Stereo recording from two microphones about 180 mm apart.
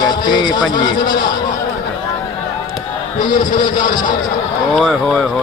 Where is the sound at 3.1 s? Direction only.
50° left (ahead or behind).